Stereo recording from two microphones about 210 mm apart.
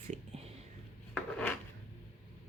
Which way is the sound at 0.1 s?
30° right (ahead or behind).